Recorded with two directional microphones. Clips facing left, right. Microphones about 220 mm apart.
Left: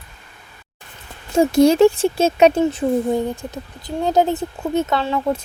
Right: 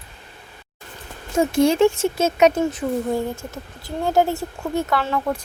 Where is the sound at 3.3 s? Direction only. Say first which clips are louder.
Left 3 dB; 20° left (ahead or behind).